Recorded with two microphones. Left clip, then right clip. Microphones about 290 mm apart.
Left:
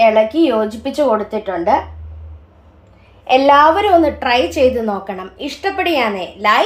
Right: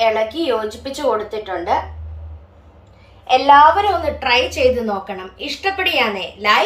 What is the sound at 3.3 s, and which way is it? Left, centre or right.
A woman's voice, left.